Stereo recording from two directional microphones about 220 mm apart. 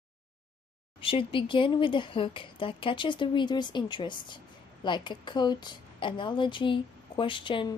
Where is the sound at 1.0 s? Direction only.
25° left (ahead or behind).